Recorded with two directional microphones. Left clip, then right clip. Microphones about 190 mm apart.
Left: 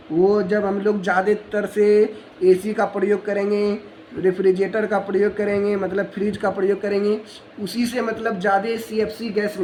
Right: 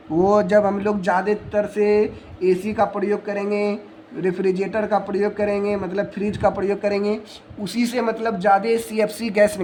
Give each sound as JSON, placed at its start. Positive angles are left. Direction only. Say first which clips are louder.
{"t": 0.2, "sound": "a man's voice", "louder": "right 2 dB", "side_deg": -20}